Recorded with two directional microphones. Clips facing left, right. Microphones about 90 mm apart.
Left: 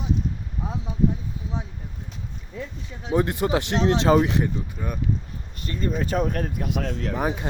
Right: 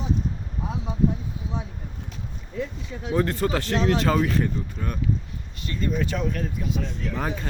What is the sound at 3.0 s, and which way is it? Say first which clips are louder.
Speech: left 1 dB; 15° left (ahead or behind).